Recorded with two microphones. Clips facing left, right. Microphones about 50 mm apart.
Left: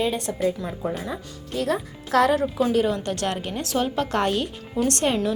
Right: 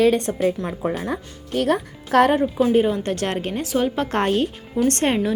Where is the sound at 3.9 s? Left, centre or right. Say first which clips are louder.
Right 2 dB; right.